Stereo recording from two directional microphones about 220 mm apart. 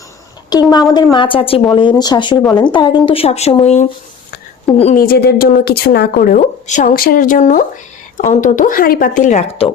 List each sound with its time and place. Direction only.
0.5 s a woman's voice: 20° left (ahead or behind)
2.4 s a woman's voice: 5° left (ahead or behind)
2.7 s a woman's voice: 20° left (ahead or behind)
5.0 s a woman's voice: 45° left (ahead or behind)